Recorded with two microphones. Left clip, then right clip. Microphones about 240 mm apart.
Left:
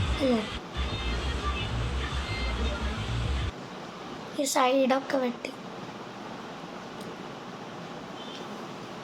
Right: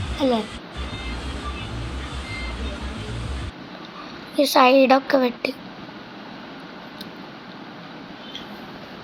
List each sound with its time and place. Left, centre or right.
0.1 s speech: centre
0.9 s music: centre
2.3 s vehicle: centre
4.4 s a woman's voice: centre